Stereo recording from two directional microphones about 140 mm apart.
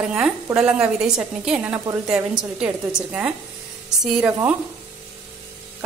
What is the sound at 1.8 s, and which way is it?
Speech, 20° right (ahead or behind).